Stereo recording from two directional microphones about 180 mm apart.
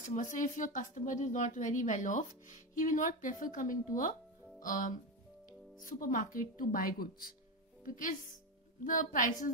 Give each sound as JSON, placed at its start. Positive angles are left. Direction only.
{"t": 0.0, "sound": "speech", "side_deg": 45}